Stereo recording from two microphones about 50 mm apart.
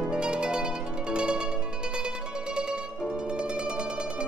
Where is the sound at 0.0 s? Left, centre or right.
Centre.